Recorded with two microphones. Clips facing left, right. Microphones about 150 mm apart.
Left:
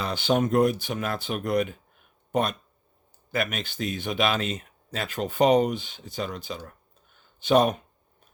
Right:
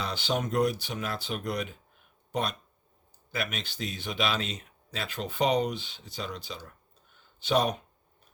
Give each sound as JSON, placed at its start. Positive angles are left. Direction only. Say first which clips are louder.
{"t": 0.0, "sound": "speech", "louder": "left 6 dB", "side_deg": 50}